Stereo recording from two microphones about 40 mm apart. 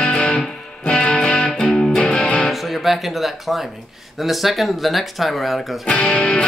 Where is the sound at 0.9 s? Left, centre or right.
Left.